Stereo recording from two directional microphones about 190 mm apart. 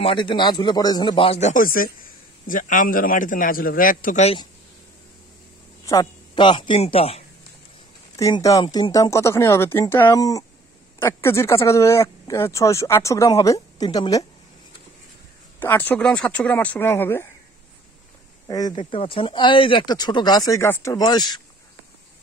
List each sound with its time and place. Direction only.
0.0 s a man's voice: 25° left (ahead or behind)
5.9 s speech: 20° left (ahead or behind)
8.2 s speech: 15° left (ahead or behind)
15.6 s speech: 10° left (ahead or behind)
18.5 s speech: 20° left (ahead or behind)